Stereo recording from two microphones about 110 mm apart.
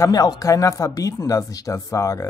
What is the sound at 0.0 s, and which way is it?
Speech, 35° left (ahead or behind).